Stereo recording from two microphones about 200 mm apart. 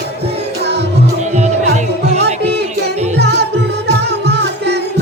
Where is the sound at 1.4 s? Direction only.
35° right (ahead or behind).